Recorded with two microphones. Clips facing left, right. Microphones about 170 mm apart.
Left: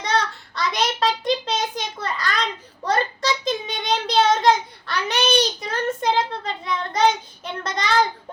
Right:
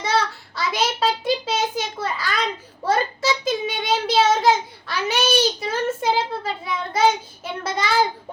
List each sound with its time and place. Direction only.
0.0 s child singing: 5° right (ahead or behind)